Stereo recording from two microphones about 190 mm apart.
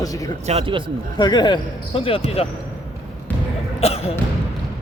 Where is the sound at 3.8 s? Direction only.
30° left (ahead or behind).